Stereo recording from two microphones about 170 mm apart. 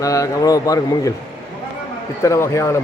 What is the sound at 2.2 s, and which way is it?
Speech, 15° left (ahead or behind).